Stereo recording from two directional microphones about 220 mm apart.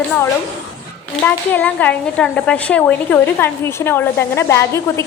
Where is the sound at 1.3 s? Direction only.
10° left (ahead or behind).